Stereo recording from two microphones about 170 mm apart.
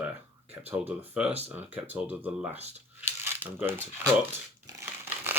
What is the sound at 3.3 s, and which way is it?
Speech, 15° right (ahead or behind).